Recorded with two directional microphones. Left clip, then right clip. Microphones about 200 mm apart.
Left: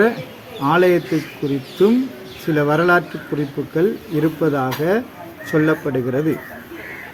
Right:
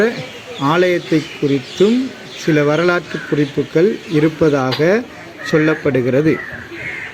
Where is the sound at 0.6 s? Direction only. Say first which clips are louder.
Right 1 dB; 20° right (ahead or behind).